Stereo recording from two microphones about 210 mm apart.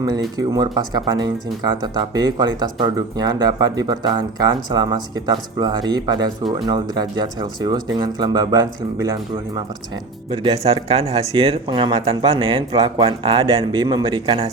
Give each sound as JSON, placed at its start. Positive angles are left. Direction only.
{"t": 0.3, "sound": "speech", "side_deg": -20}
{"t": 10.2, "sound": "speech", "side_deg": -25}